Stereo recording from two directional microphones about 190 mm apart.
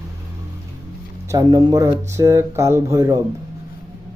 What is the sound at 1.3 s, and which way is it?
Speech, 20° right (ahead or behind).